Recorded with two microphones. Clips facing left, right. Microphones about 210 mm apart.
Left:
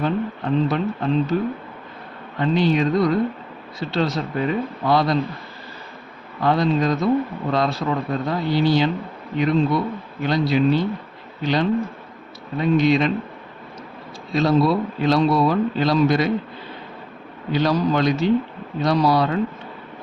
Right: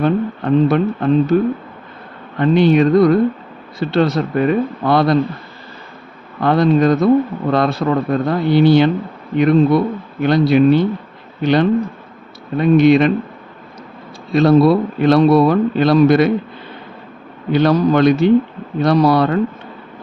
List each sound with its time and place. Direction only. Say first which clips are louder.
0.0 s a man's voice: right 6 dB; 60° right (ahead or behind)
2.4 s a man's voice: right 7 dB; 60° right (ahead or behind)
6.4 s a man's voice: right 6 dB; 60° right (ahead or behind)
14.3 s a man's voice: right 7 dB; 60° right (ahead or behind)
17.5 s a man's voice: right 6 dB; 60° right (ahead or behind)